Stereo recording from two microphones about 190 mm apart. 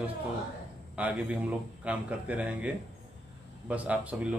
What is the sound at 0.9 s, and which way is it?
A man's voice, 5° right (ahead or behind).